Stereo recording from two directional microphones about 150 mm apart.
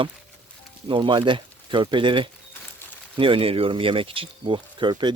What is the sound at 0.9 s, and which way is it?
Speech, 30° right (ahead or behind).